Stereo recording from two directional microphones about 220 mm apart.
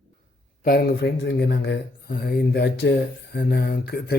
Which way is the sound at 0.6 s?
45° left (ahead or behind).